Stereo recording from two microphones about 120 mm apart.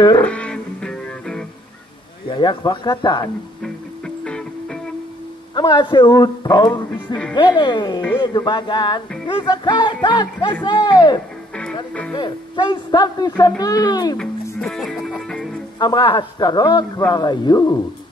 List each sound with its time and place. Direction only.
0.2 s music: 10° left (ahead or behind)
2.3 s a man's voice: 40° left (ahead or behind)
3.6 s music: 5° left (ahead or behind)
5.5 s a man's voice: 35° left (ahead or behind)
14.1 s music: 5° left (ahead or behind)
15.8 s a man's voice: 40° left (ahead or behind)